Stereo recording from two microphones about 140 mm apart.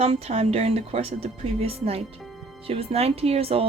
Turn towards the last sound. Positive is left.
turn(degrees=-45)  # may be behind; listen again after turning